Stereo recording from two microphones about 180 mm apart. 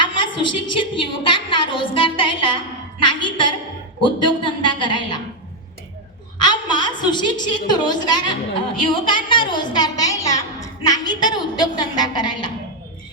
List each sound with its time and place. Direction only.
0.0 s a woman's voice: 25° left (ahead or behind)
6.4 s a woman's voice: 25° left (ahead or behind)
9.5 s a sound: 25° left (ahead or behind)